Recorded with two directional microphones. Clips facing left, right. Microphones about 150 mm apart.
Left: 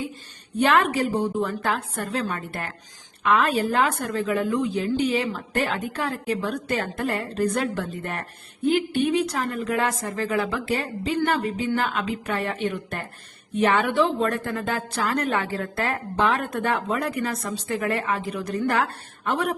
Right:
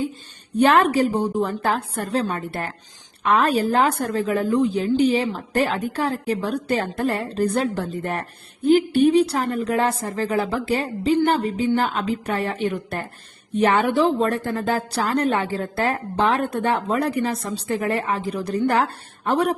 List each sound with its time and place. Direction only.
0.6 s a woman's voice: 35° right (ahead or behind)